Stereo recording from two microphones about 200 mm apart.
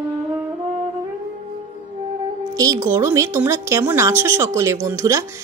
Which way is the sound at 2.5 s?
15° right (ahead or behind).